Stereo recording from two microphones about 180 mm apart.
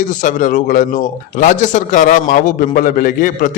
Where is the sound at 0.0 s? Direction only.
45° left (ahead or behind).